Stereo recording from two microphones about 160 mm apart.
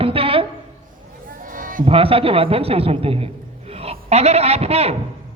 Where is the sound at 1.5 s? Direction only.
60° right (ahead or behind).